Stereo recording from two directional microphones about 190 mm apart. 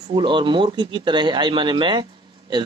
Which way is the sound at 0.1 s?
25° right (ahead or behind).